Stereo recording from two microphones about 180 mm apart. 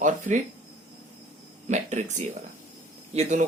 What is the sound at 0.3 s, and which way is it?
Speech, 45° right (ahead or behind).